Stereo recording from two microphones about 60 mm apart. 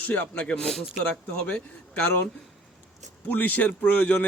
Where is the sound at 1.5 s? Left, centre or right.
Left.